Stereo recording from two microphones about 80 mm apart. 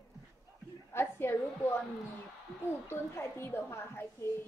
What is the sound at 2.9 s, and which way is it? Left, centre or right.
A woman's voice, left.